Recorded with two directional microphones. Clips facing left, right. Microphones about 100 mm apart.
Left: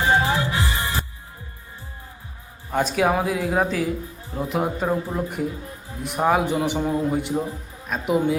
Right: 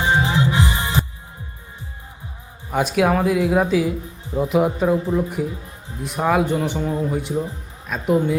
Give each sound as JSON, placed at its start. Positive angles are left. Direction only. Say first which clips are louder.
{"t": 0.0, "sound": "music", "louder": "right 1 dB", "side_deg": -20}
{"t": 2.6, "sound": "speech", "louder": "right 2 dB", "side_deg": -5}
{"t": 3.1, "sound": "speech", "louder": "right 4 dB", "side_deg": 10}